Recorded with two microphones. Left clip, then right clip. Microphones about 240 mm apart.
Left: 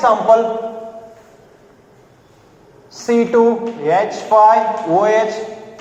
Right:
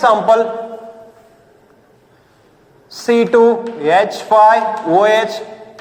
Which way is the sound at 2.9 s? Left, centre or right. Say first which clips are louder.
Right 2 dB; right.